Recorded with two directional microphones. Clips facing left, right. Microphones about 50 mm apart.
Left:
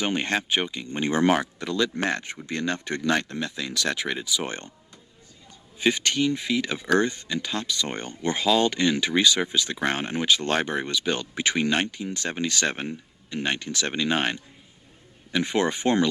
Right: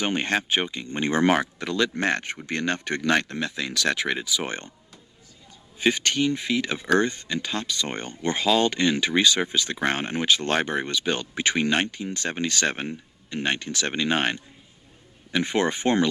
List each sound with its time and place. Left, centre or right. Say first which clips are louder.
0.0 s speech: right 1 dB; right
1.5 s a man's voice: right 1 dB; right
4.4 s speech: right 1 dB; right
5.8 s speech: even; right